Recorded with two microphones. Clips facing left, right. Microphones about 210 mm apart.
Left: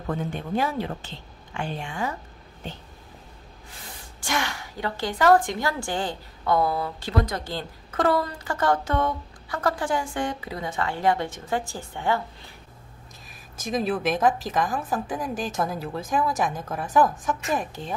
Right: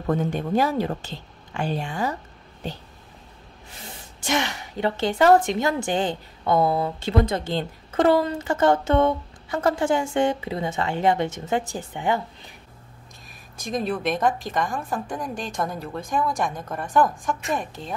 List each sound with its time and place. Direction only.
0.1 s speech: 40° right (ahead or behind)
4.2 s speech: 20° right (ahead or behind)
13.6 s a woman's voice: centre (ahead or behind)